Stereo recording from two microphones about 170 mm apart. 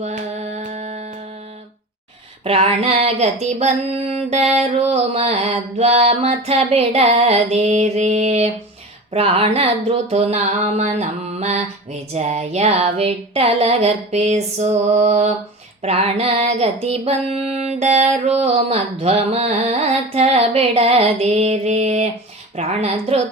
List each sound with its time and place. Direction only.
0.0 s carnatic music: 40° right (ahead or behind)
0.6 s a sound: 45° right (ahead or behind)
2.4 s female singing: 35° right (ahead or behind)